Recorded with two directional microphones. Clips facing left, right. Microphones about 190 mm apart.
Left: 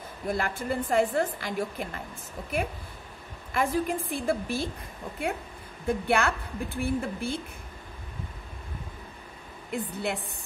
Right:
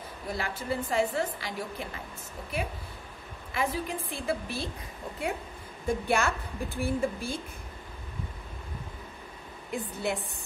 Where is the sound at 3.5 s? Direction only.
50° left (ahead or behind).